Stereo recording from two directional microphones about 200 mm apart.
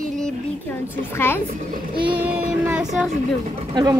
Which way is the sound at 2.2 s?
5° right (ahead or behind).